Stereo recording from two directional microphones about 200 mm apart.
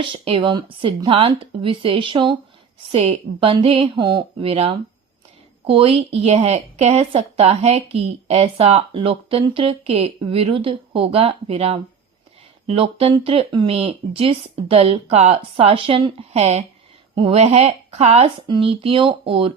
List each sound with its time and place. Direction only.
0.0 s speech: 25° right (ahead or behind)